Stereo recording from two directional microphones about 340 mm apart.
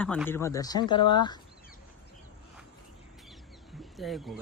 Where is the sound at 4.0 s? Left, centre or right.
Centre.